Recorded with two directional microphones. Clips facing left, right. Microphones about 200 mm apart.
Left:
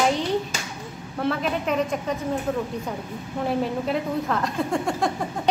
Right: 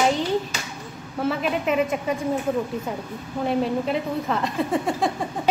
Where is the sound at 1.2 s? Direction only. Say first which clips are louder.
Right 1 dB; 5° right (ahead or behind).